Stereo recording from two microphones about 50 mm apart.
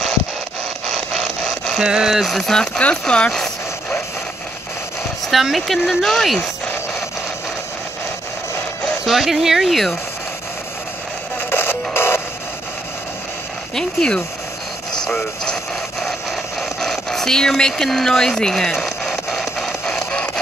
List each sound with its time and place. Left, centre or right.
0.9 s wood: centre
1.8 s speech: centre
2.2 s speech: centre
3.3 s speech: centre
5.3 s speech: centre
9.0 s speech: centre
11.3 s music: left
13.7 s speech: centre
15.4 s radio: centre
16.3 s a sound: centre